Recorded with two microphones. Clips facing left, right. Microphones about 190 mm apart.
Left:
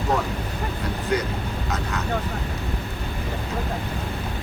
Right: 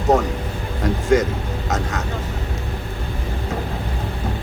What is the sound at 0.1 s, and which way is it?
Speech, 45° right (ahead or behind).